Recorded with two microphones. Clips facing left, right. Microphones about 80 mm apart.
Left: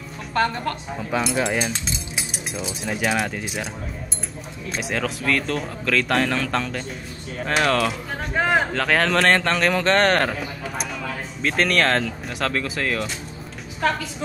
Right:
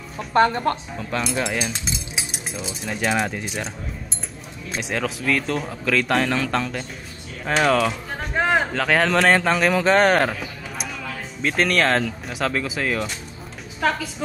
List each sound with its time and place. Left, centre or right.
0.3 s a woman's voice: right
0.9 s speech: centre
4.7 s speech: centre
11.4 s speech: centre